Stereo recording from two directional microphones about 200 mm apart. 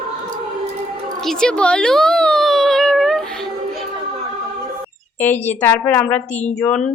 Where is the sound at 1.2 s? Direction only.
5° left (ahead or behind).